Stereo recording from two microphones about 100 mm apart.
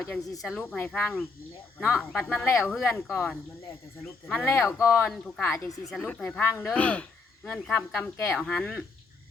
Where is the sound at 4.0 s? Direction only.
10° left (ahead or behind).